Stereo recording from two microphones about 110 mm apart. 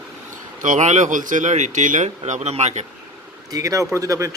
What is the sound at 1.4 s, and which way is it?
Speech, 90° right.